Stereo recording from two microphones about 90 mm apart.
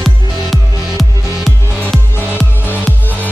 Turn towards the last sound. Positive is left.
turn(degrees=20)  # may be behind; listen again after turning